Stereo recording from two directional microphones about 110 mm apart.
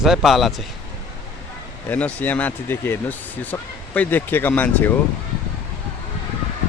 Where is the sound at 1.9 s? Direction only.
15° left (ahead or behind).